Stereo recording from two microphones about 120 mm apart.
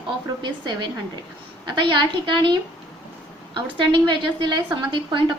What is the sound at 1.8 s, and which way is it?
Speech, 40° right (ahead or behind).